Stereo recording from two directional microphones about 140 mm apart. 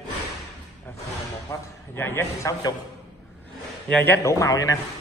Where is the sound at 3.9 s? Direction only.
15° left (ahead or behind).